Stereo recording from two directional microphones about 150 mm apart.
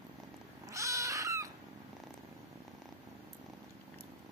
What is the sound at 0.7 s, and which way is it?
Cat, 20° right (ahead or behind).